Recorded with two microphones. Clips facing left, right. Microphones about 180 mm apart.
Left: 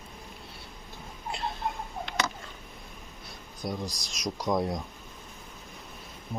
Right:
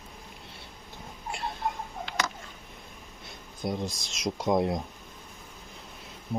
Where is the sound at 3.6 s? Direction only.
25° right (ahead or behind).